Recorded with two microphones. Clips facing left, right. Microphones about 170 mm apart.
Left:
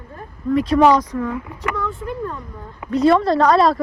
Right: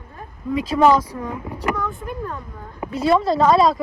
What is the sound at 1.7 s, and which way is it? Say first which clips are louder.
Speech: left 2 dB; 15° right (ahead or behind).